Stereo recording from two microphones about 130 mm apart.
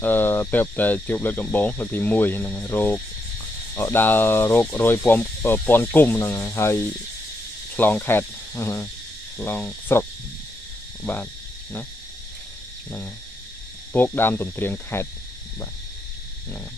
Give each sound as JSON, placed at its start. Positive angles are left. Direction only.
{"t": 0.0, "sound": "speech", "side_deg": 15}
{"t": 13.9, "sound": "speech", "side_deg": 15}